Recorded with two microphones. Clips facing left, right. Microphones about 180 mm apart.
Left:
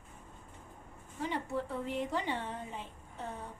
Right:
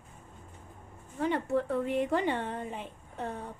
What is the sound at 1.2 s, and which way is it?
A woman's voice, 60° right (ahead or behind).